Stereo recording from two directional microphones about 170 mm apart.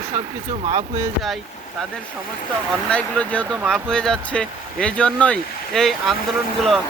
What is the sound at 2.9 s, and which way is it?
Speech, 5° left (ahead or behind).